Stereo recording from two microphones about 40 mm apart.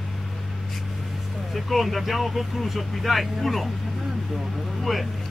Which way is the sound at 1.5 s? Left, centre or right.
Centre.